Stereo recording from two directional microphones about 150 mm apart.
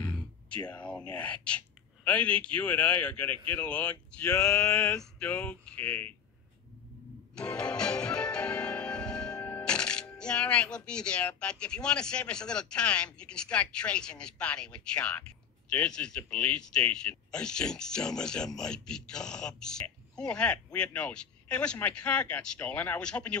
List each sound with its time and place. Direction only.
0.0 s a man's voice: 10° left (ahead or behind)
4.3 s male singing: 20° left (ahead or behind)
5.2 s a man's voice: 10° left (ahead or behind)
7.3 s music: 5° left (ahead or behind)
15.7 s speech: 5° left (ahead or behind)